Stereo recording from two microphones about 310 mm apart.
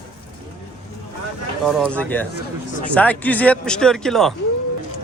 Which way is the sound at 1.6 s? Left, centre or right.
Centre.